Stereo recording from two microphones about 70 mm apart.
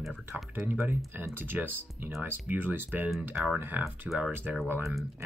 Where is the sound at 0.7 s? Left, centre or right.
Right.